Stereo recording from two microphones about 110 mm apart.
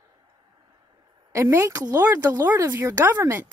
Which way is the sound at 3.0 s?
20° right (ahead or behind).